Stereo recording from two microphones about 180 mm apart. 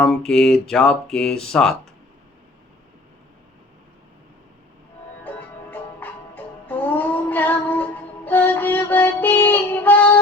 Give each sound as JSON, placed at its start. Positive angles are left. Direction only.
{"t": 0.0, "sound": "speech", "side_deg": 5}
{"t": 5.2, "sound": "music", "side_deg": 10}